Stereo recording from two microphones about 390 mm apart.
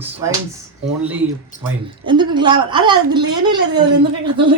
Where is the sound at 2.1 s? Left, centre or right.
Centre.